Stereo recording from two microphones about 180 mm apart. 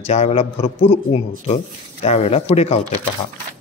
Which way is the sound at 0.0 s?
35° left (ahead or behind).